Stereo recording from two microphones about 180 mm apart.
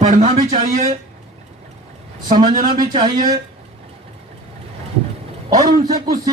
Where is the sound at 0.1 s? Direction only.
45° right (ahead or behind).